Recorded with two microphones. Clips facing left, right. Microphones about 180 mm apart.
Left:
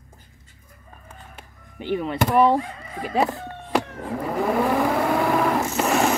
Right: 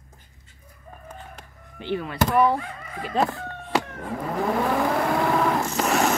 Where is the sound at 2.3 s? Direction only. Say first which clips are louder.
Left 3 dB; 30° left (ahead or behind).